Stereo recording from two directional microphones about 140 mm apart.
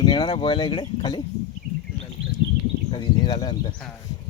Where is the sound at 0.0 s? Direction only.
30° left (ahead or behind).